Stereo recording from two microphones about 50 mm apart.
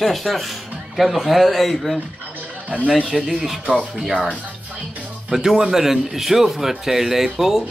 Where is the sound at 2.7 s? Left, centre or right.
Right.